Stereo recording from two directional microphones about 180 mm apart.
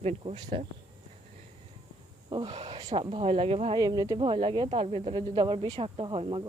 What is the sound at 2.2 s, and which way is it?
Speech, 30° right (ahead or behind).